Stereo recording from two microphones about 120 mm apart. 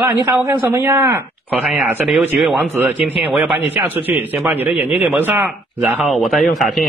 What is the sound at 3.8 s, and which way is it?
Speech, 15° right (ahead or behind).